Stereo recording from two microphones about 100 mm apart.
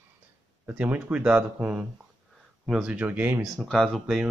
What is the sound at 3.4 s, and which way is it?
Speech, centre (ahead or behind).